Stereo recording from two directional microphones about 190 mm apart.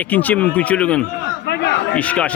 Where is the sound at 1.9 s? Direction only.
5° left (ahead or behind).